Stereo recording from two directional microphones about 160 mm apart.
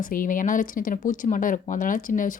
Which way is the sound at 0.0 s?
60° left (ahead or behind).